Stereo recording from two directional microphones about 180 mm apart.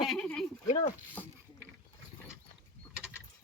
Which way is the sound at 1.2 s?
10° left (ahead or behind).